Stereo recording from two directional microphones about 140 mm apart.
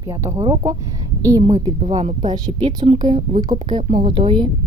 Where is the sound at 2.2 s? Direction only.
30° right (ahead or behind).